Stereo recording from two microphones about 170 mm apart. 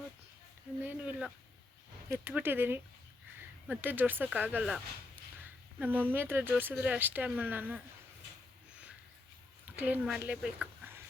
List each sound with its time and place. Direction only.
0.9 s a sound: 5° right (ahead or behind)
2.0 s speech: 10° right (ahead or behind)
5.8 s speech: 10° right (ahead or behind)
9.7 s speech: 10° right (ahead or behind)